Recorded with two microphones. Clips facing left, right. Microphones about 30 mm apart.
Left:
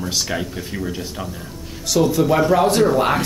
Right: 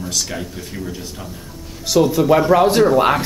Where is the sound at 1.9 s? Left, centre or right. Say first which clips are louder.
Right 3 dB; centre.